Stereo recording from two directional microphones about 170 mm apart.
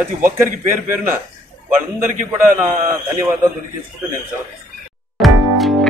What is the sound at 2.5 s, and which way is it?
Speech, 20° right (ahead or behind).